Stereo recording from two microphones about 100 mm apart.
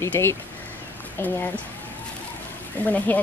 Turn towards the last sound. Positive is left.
turn(degrees=15)  # may be behind; listen again after turning